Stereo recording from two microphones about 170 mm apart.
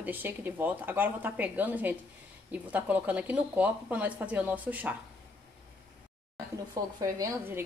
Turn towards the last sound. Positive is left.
turn(degrees=-20)  # may be behind; listen again after turning